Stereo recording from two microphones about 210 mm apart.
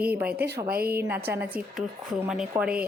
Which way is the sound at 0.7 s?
45° right (ahead or behind).